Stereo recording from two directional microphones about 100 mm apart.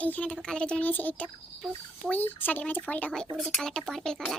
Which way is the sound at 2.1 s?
20° left (ahead or behind).